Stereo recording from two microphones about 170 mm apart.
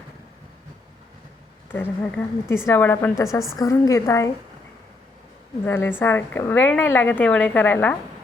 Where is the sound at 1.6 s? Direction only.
10° left (ahead or behind).